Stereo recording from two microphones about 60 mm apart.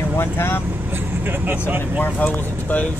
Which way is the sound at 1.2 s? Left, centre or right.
Right.